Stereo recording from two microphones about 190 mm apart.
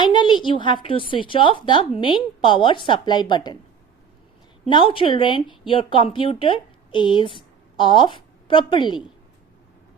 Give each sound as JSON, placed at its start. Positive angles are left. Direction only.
{"t": 0.0, "sound": "a woman's voice", "side_deg": 25}
{"t": 4.7, "sound": "a woman's voice", "side_deg": 25}